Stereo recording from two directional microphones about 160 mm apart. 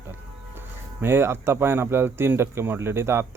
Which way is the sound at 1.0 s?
15° right (ahead or behind).